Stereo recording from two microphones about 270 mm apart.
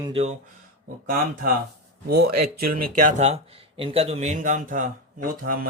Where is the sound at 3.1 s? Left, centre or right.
Right.